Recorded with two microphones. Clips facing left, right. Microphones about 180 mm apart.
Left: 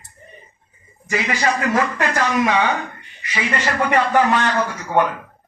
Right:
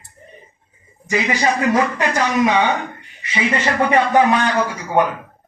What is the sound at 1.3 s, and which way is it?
Speech, 20° right (ahead or behind).